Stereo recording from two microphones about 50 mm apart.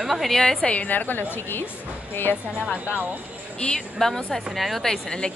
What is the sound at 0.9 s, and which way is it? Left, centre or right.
A woman's voice, left.